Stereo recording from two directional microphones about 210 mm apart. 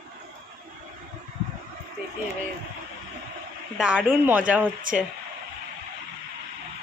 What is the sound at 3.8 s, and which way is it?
Speech, 5° right (ahead or behind).